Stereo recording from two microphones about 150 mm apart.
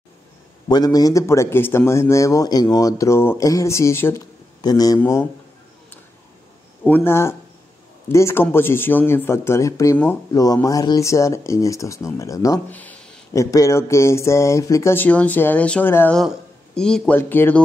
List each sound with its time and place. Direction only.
0.7 s a man's voice: 25° left (ahead or behind)
6.8 s a man's voice: 15° left (ahead or behind)
12.6 s a sound: 10° left (ahead or behind)
13.3 s speech: 20° left (ahead or behind)
16.2 s a man's voice: 5° left (ahead or behind)